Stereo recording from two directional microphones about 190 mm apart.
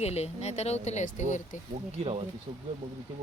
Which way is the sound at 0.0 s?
35° left (ahead or behind).